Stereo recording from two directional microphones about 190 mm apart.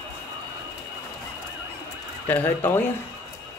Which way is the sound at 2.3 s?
10° left (ahead or behind).